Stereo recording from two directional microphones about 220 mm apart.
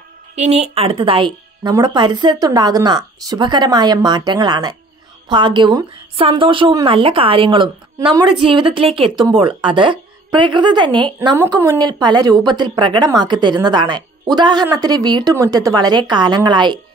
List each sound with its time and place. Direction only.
0.4 s speech: 30° right (ahead or behind)